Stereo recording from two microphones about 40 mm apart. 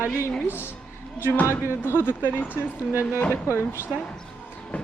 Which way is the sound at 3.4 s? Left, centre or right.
Left.